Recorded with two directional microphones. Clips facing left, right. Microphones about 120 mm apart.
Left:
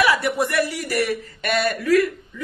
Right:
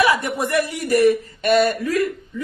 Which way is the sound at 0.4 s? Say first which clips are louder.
Right 1 dB; 20° right (ahead or behind).